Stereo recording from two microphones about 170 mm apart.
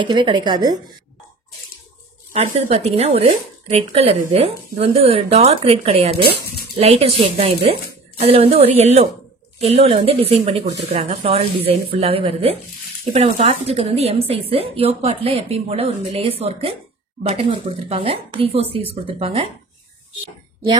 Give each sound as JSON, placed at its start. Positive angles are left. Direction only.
{"t": 0.0, "sound": "speech", "side_deg": -30}
{"t": 2.3, "sound": "a woman's voice", "side_deg": -35}